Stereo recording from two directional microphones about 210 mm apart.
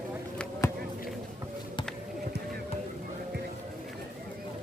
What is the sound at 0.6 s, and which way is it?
Basketball bounce, 15° left (ahead or behind).